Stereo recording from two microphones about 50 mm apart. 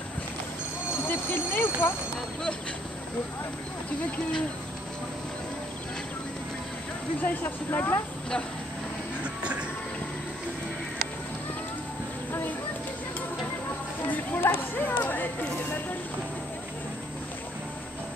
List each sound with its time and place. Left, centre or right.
1.0 s speech: left
7.2 s speech: left
9.2 s music: right
14.1 s speech: left